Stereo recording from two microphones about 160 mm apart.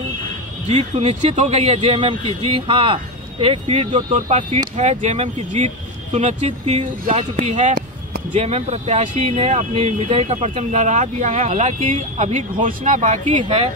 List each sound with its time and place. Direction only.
0.7 s speech: 40° right (ahead or behind)
3.9 s speech: 55° right (ahead or behind)